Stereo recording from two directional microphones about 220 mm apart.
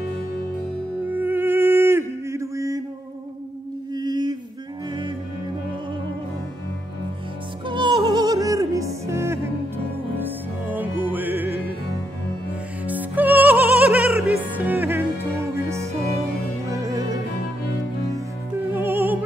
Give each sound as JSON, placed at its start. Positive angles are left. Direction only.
{"t": 1.1, "sound": "music", "side_deg": -10}
{"t": 3.9, "sound": "a sound", "side_deg": -20}
{"t": 7.6, "sound": "music", "side_deg": -20}
{"t": 10.7, "sound": "music", "side_deg": -10}
{"t": 12.8, "sound": "music", "side_deg": -10}
{"t": 18.7, "sound": "music", "side_deg": -10}